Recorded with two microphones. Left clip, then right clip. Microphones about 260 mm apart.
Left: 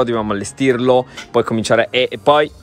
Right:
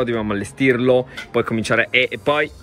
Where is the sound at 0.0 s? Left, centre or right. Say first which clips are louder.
Left 4 dB; centre.